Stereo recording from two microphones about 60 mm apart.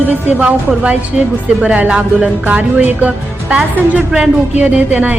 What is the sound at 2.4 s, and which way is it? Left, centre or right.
A woman's voice, right.